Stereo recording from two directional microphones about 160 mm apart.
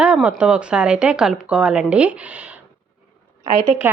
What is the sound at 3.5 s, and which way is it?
Speech, 50° right (ahead or behind).